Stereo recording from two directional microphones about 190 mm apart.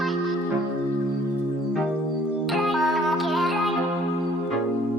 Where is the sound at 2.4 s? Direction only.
Centre (ahead or behind).